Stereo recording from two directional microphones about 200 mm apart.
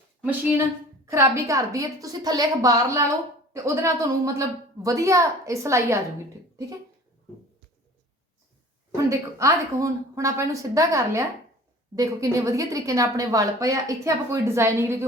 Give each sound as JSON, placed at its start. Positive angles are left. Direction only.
{"t": 0.2, "sound": "a woman's voice", "side_deg": -10}
{"t": 9.0, "sound": "a woman's voice", "side_deg": -15}